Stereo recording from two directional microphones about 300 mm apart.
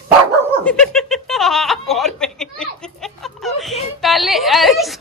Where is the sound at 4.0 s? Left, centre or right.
Centre.